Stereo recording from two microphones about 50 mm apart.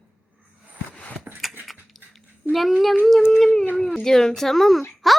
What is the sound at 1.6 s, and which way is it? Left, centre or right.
Dog, centre.